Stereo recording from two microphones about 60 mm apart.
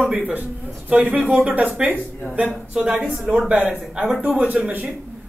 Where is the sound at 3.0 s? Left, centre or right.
Centre.